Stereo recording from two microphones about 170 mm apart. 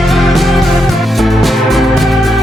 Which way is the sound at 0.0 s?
Centre (ahead or behind).